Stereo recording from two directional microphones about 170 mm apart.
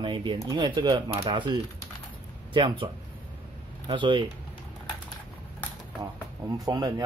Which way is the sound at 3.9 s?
30° right (ahead or behind).